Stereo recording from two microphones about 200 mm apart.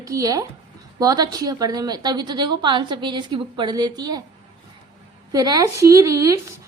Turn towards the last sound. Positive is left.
turn(degrees=-15)  # may be behind; listen again after turning